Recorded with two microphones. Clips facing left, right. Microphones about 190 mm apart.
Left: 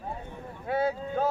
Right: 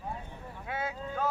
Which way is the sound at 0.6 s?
35° left (ahead or behind).